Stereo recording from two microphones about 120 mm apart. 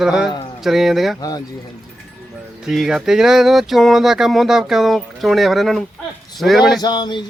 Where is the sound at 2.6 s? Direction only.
5° right (ahead or behind).